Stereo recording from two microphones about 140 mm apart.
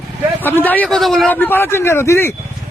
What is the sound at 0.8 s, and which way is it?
Speech, centre (ahead or behind).